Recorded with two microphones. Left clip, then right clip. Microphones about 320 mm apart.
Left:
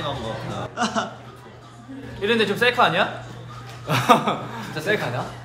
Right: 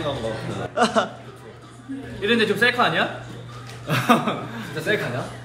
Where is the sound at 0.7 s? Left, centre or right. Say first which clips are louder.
Right 5 dB; centre.